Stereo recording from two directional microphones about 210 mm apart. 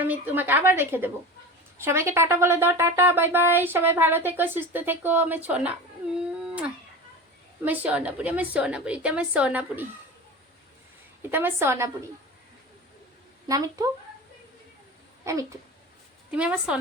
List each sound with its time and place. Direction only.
0.0 s speech: 10° right (ahead or behind)
7.6 s speech: 10° right (ahead or behind)
11.2 s speech: 10° right (ahead or behind)
13.5 s speech: 15° right (ahead or behind)
15.2 s a child's voice: 15° right (ahead or behind)